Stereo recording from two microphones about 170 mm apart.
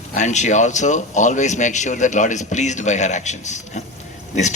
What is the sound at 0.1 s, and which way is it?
Speech, 45° left (ahead or behind).